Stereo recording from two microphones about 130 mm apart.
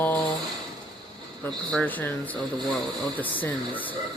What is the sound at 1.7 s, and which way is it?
Speech, 10° left (ahead or behind).